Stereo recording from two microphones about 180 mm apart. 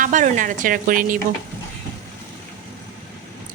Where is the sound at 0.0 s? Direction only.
45° right (ahead or behind).